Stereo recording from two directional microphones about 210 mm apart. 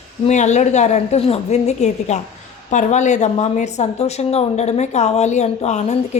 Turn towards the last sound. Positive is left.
turn(degrees=35)  # may be behind; listen again after turning